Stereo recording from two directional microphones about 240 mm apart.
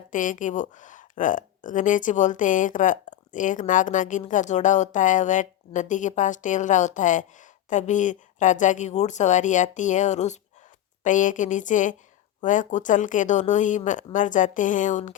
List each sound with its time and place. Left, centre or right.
0.1 s speech: left